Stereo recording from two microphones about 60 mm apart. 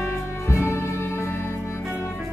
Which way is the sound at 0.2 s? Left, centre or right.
Left.